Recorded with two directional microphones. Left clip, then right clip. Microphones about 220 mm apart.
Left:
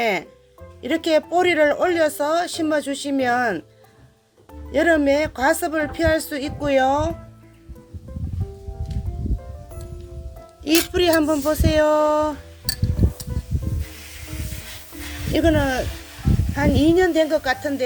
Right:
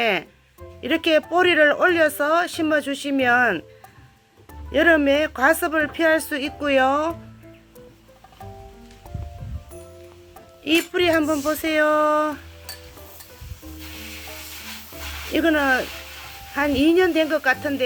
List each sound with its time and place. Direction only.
0.0 s speech: centre (ahead or behind)
4.7 s speech: centre (ahead or behind)
10.6 s speech: 10° left (ahead or behind)
15.3 s speech: 5° left (ahead or behind)